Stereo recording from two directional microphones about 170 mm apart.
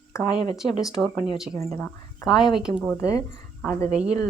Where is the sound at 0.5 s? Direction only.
Centre (ahead or behind).